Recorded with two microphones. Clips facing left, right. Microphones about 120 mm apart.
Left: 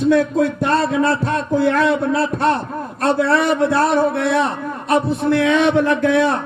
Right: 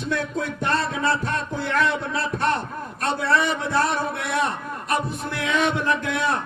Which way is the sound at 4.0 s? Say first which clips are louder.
Left 8 dB; 30° left (ahead or behind).